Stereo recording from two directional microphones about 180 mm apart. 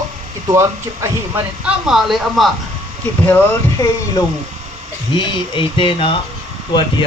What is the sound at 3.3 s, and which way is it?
Speech, 10° left (ahead or behind).